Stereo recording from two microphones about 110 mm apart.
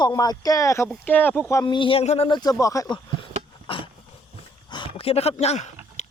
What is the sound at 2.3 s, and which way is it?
Speech, 40° left (ahead or behind).